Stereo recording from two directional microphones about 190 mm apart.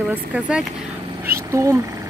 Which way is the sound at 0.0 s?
5° right (ahead or behind).